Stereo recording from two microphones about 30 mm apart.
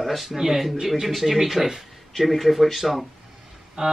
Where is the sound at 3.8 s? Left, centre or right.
Right.